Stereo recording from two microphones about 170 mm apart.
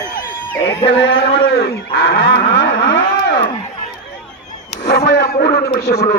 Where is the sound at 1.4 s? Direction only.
70° left (ahead or behind).